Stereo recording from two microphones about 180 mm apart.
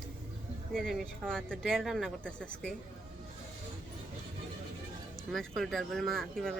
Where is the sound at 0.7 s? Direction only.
Centre (ahead or behind).